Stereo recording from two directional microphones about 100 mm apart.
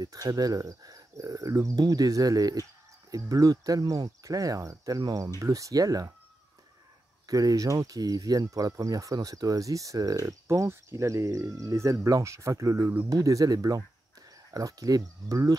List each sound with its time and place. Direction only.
0.0 s speech: 35° right (ahead or behind)
7.2 s speech: 35° right (ahead or behind)